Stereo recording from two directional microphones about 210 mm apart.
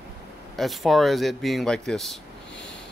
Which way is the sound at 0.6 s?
Centre (ahead or behind).